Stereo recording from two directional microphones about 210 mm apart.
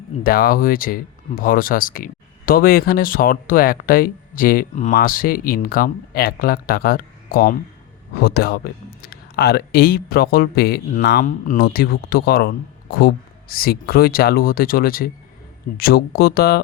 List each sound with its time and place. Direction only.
0.2 s speech: 45° left (ahead or behind)